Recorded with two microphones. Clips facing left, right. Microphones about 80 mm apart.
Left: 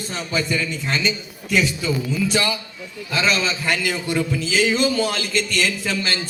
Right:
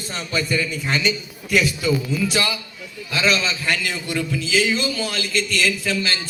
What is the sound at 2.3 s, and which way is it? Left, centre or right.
Speech, left.